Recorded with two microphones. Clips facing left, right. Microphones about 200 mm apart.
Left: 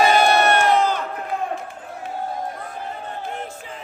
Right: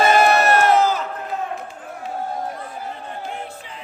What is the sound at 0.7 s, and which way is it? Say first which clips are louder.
Crowd: right 2 dB; 5° right (ahead or behind).